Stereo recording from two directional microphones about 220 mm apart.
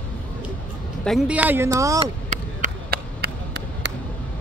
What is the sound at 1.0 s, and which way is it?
Speech, 5° right (ahead or behind).